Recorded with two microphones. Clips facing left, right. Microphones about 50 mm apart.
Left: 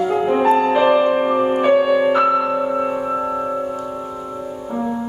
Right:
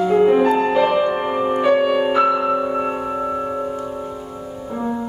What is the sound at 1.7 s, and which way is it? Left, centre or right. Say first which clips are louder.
Music: left 2 dB; centre.